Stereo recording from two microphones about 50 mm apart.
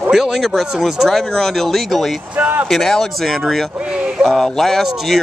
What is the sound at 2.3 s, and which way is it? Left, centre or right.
Speech, right.